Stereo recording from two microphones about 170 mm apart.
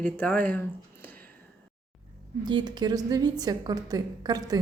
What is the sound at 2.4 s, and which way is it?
A woman's voice, 25° right (ahead or behind).